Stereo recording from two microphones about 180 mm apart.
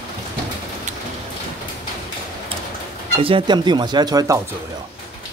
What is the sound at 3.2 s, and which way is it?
Speech, 30° right (ahead or behind).